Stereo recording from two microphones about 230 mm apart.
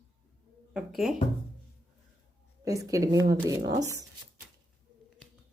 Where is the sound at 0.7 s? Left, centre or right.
Centre.